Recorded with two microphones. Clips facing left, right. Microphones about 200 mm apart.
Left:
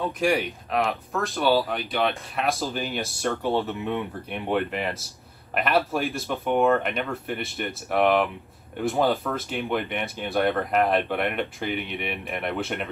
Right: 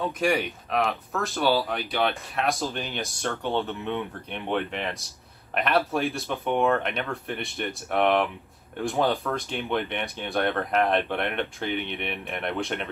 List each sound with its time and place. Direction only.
0.0 s speech: centre (ahead or behind)